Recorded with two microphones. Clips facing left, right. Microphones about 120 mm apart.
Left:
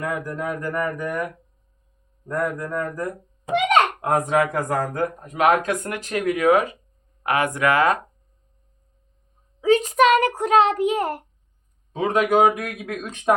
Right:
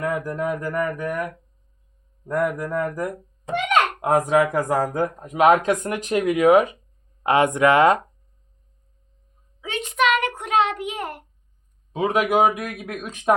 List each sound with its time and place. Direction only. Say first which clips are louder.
0.0 s speech: right 2 dB; 10° right (ahead or behind)
9.6 s a child's voice: left 7 dB; 40° left (ahead or behind)
11.9 s speech: left 1 dB; 10° right (ahead or behind)